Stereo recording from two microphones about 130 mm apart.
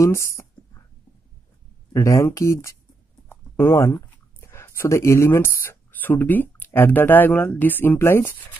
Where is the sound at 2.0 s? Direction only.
20° left (ahead or behind).